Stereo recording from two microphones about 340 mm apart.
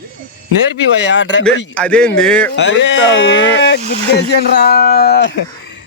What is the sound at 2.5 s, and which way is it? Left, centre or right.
Speech, left.